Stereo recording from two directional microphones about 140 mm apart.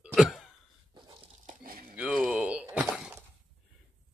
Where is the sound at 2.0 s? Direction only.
5° right (ahead or behind).